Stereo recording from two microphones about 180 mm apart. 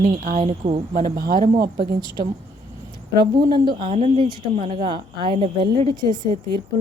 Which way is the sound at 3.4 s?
25° right (ahead or behind).